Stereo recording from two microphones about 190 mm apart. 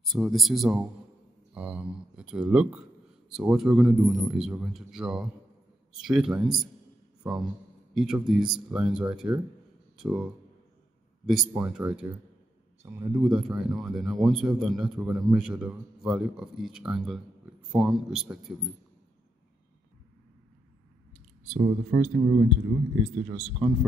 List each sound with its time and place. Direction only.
0.0 s speech: centre (ahead or behind)
7.9 s speech: centre (ahead or behind)
21.5 s speech: 20° right (ahead or behind)
23.2 s speech: 5° right (ahead or behind)